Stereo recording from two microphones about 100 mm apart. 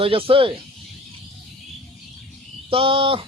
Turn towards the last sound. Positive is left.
turn(degrees=-60)  # may be behind; listen again after turning